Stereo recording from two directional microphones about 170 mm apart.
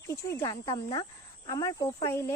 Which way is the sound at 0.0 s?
15° left (ahead or behind).